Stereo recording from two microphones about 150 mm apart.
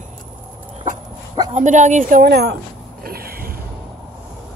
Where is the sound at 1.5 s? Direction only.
55° right (ahead or behind); by 3.5 s 85° right.